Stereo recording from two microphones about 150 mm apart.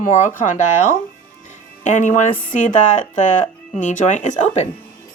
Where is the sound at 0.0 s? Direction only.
60° left (ahead or behind).